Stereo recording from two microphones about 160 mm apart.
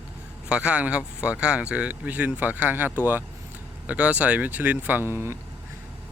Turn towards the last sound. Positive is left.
turn(degrees=-15)  # may be behind; listen again after turning